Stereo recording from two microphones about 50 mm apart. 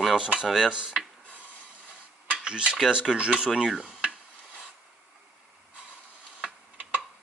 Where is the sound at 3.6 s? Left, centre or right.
Centre.